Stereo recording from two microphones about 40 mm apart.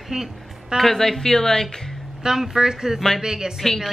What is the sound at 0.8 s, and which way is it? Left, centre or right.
Speech, centre.